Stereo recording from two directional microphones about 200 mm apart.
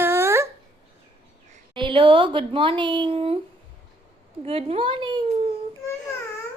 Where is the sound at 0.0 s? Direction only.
10° right (ahead or behind).